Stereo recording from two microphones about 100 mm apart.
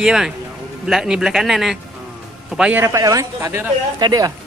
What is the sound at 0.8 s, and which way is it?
Speech, 5° right (ahead or behind).